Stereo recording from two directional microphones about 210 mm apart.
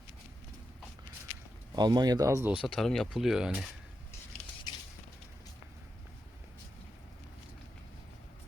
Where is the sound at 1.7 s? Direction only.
20° right (ahead or behind).